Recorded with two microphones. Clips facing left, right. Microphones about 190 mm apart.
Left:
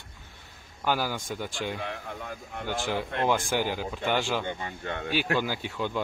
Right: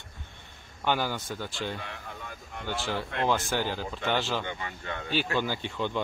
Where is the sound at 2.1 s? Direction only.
50° left (ahead or behind).